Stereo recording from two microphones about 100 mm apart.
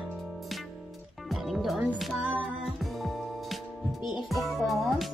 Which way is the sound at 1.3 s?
Centre (ahead or behind).